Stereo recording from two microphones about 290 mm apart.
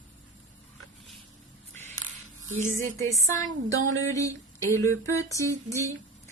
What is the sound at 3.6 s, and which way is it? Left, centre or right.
Speech, right.